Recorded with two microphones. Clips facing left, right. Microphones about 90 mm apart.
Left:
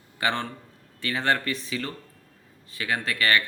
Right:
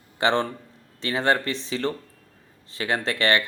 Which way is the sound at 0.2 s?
25° right (ahead or behind).